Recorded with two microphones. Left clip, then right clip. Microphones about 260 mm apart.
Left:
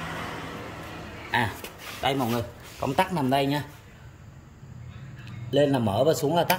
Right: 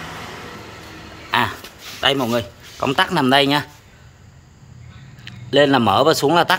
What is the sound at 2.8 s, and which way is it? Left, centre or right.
Speech, right.